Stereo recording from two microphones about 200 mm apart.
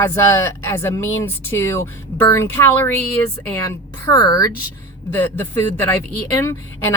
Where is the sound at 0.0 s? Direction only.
10° left (ahead or behind).